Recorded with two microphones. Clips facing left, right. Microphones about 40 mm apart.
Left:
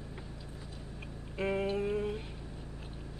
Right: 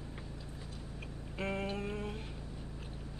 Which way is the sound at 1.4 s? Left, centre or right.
Centre.